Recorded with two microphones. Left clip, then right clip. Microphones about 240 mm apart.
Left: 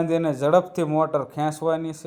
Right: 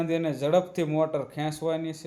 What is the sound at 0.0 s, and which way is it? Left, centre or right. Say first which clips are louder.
A man's voice: left 5 dB; centre.